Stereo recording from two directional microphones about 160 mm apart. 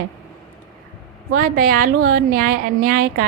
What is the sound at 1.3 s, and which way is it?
A woman's voice, 65° right (ahead or behind).